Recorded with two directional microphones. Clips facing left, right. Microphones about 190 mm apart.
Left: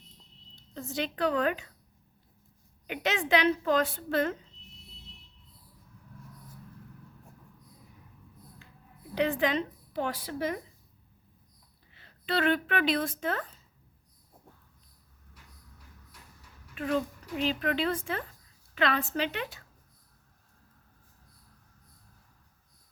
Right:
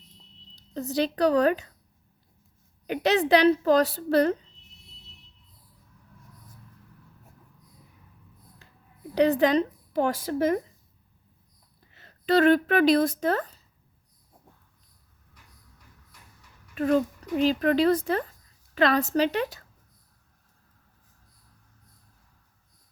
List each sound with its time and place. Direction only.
0.5 s speech: 35° right (ahead or behind)
2.8 s speech: 35° right (ahead or behind)
8.6 s a sound: 40° right (ahead or behind)
9.1 s a woman's voice: 40° right (ahead or behind)
11.9 s a woman's voice: 40° right (ahead or behind)
16.7 s speech: 40° right (ahead or behind)